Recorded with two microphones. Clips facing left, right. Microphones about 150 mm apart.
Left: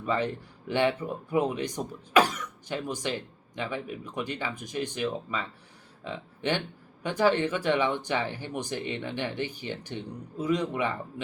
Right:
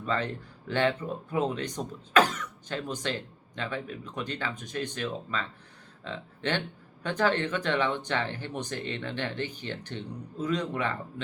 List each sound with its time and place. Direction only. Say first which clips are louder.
0.0 s speech: left 2 dB; 10° left (ahead or behind)